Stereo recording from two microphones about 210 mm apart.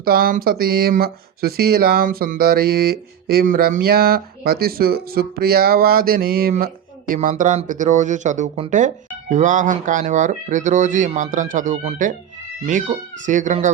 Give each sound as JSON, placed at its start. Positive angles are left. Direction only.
{"t": 0.0, "sound": "speech", "side_deg": -45}